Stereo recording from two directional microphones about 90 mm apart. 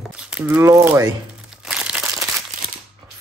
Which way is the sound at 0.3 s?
15° right (ahead or behind).